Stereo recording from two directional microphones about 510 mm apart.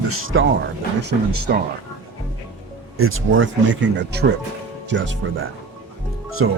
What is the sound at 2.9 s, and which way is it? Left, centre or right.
Speech, right.